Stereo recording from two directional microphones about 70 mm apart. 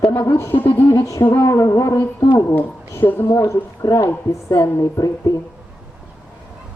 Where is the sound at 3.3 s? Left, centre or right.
Left.